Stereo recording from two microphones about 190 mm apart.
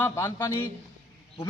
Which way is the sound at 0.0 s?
15° left (ahead or behind).